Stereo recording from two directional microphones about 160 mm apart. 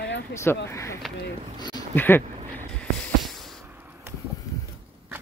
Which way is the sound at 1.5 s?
25° left (ahead or behind).